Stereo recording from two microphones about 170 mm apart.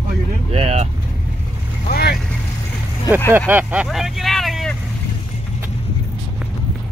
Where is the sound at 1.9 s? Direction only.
65° left (ahead or behind).